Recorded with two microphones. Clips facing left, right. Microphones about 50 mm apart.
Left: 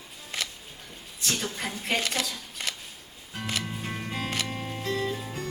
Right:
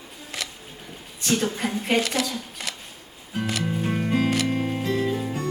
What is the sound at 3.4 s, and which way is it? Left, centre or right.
Music, centre.